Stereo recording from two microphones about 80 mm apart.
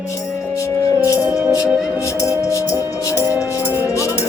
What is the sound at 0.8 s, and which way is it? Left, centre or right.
Music, left.